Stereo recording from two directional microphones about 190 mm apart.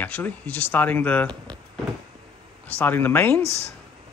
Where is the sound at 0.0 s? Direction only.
10° left (ahead or behind).